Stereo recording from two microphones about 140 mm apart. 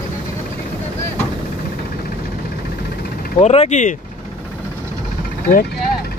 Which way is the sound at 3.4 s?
50° left (ahead or behind).